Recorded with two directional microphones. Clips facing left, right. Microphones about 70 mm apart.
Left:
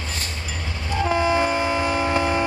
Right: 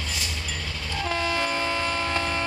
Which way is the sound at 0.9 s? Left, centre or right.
Left.